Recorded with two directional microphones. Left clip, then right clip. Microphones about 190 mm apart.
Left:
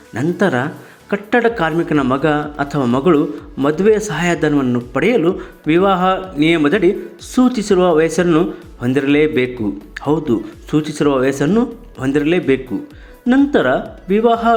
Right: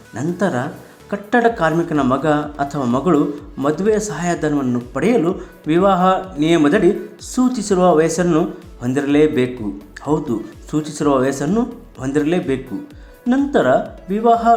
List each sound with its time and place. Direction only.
0.3 s speech: 15° left (ahead or behind)